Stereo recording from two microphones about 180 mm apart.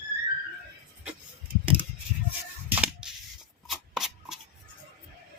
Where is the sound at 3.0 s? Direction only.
5° right (ahead or behind).